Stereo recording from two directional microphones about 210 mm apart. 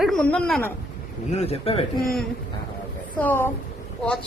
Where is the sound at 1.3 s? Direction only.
30° left (ahead or behind).